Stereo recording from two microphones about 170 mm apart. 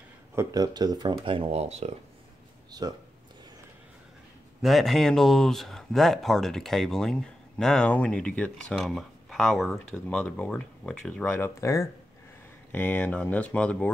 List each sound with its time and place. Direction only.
0.4 s speech: 20° right (ahead or behind); by 1.9 s 40° right (ahead or behind)
2.8 s speech: 25° right (ahead or behind)
4.6 s speech: centre (ahead or behind)
11.3 s speech: 15° left (ahead or behind)